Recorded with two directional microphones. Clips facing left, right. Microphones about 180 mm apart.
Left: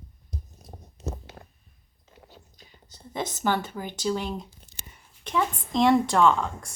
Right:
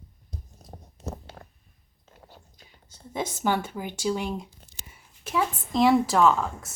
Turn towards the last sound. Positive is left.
turn(degrees=-5)  # may be behind; listen again after turning